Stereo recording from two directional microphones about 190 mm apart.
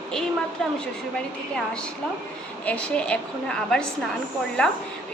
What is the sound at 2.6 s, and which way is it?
A woman's voice, 5° left (ahead or behind).